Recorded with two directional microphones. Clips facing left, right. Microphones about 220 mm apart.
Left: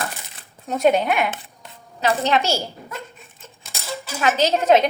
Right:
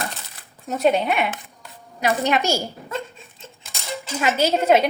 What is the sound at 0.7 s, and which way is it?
Speech, centre (ahead or behind).